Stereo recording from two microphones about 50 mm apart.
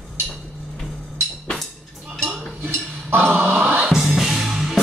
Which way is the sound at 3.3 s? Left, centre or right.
Right.